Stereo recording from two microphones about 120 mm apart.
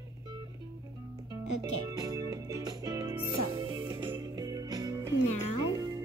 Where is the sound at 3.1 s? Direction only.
20° right (ahead or behind).